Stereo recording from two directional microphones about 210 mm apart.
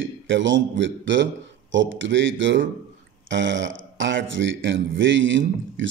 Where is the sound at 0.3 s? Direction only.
60° right (ahead or behind).